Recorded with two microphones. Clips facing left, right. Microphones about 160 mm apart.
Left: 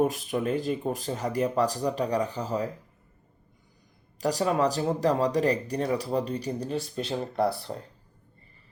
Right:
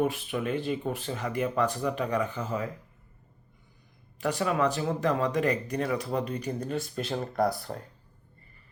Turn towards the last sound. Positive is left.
turn(degrees=30)  # may be behind; listen again after turning